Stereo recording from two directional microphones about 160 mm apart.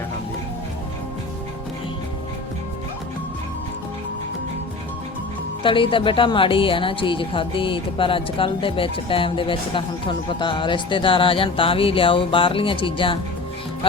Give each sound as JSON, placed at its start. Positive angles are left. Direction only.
{"t": 5.6, "sound": "a woman's voice", "side_deg": 30}